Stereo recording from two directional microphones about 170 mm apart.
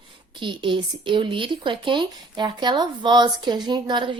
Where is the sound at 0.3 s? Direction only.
30° right (ahead or behind).